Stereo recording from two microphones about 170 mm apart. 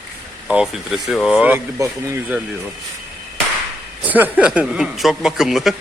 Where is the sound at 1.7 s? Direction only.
15° right (ahead or behind).